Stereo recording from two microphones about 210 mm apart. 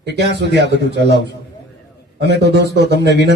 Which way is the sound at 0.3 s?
55° right (ahead or behind).